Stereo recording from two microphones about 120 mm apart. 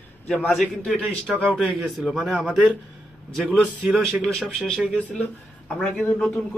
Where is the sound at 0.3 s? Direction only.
Centre (ahead or behind).